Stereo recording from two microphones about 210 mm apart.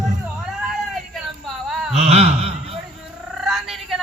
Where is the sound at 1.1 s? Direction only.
Centre (ahead or behind).